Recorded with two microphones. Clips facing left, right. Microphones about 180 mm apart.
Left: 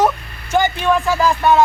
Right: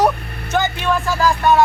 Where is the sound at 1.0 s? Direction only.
15° left (ahead or behind).